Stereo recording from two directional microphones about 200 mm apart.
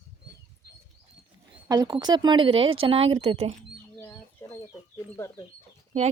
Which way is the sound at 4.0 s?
15° left (ahead or behind).